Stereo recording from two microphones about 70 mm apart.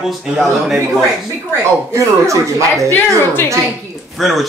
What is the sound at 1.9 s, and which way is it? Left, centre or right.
Speech, right.